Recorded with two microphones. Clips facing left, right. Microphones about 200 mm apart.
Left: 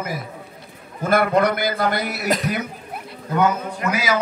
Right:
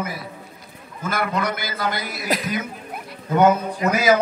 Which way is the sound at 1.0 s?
55° left (ahead or behind).